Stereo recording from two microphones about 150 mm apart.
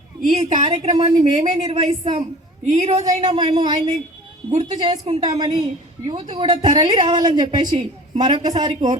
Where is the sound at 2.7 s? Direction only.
50° right (ahead or behind).